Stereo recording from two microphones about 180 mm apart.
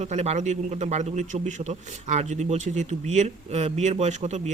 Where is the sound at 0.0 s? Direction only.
35° right (ahead or behind).